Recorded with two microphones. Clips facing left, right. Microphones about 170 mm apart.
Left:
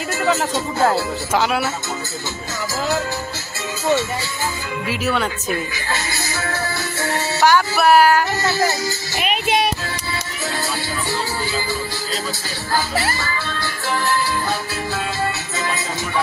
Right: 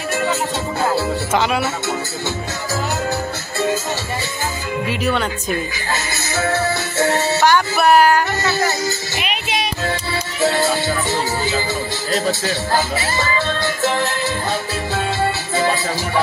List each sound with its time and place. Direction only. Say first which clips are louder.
1.3 s speech: even; 5° left (ahead or behind)
4.8 s speech: even; 5° left (ahead or behind)
7.3 s speech: left 3 dB; 5° left (ahead or behind)
9.2 s music: left 6 dB; 50° left (ahead or behind)
10.4 s music: right 9 dB; 25° right (ahead or behind)
12.3 s speech: right 6 dB; 25° right (ahead or behind)
15.5 s music: right 7 dB; 30° right (ahead or behind)